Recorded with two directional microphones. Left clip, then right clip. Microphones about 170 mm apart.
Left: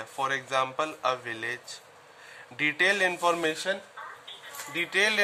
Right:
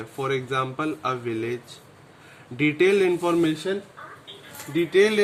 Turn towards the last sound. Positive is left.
turn(degrees=20)  # may be behind; listen again after turning